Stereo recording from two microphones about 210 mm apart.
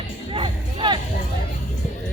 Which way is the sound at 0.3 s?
25° right (ahead or behind).